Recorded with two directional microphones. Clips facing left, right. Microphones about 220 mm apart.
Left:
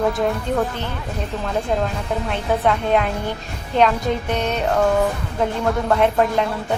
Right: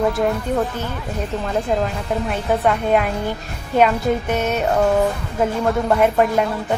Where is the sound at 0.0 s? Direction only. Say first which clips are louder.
Right 1 dB; centre (ahead or behind).